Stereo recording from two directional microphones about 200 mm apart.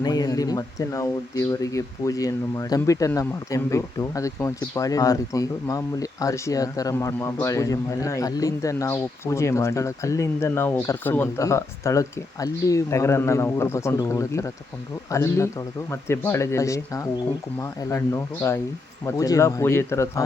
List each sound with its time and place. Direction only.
0.0 s speech: 20° left (ahead or behind)